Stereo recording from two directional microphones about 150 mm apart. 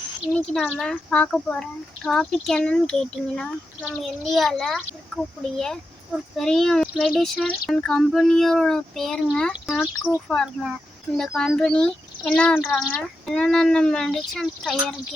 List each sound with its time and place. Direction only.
0.6 s speech: 5° left (ahead or behind)